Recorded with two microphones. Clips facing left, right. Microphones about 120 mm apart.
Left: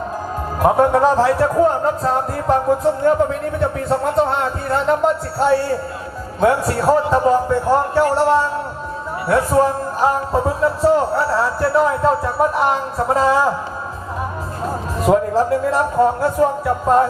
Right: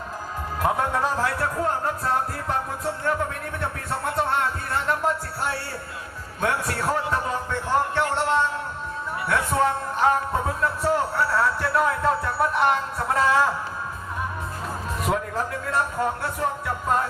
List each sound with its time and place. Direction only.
0.6 s speech: 35° left (ahead or behind)
14.6 s speech: 30° left (ahead or behind)